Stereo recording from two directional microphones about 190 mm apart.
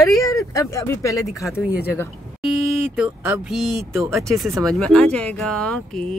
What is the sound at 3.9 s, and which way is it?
Speech, 15° right (ahead or behind).